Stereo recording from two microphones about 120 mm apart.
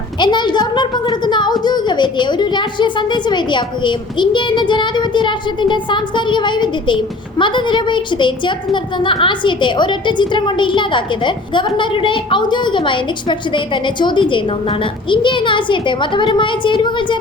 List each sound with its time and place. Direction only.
0.2 s a woman's voice: 40° left (ahead or behind)